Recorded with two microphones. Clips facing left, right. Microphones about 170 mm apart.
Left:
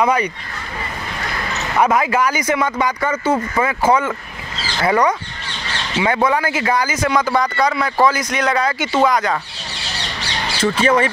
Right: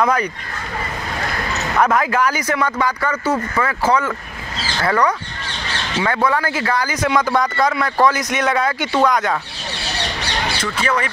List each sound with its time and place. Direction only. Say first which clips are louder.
0.0 s speech: left 1 dB; 10° left (ahead or behind)
1.8 s speech: left 1 dB; 10° left (ahead or behind)
6.9 s speech: even; centre (ahead or behind)
10.6 s speech: left 9 dB; 30° left (ahead or behind)